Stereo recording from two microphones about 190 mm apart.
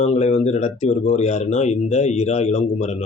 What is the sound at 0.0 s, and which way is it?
A man's voice, 35° left (ahead or behind).